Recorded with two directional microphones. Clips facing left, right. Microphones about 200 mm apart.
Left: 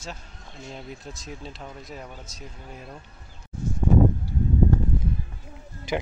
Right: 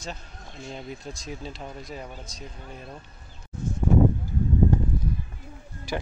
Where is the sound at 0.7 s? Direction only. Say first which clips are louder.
Right 3 dB; centre (ahead or behind).